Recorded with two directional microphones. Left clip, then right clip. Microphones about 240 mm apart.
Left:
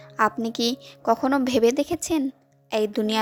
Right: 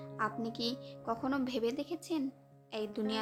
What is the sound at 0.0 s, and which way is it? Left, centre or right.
A woman's voice, left.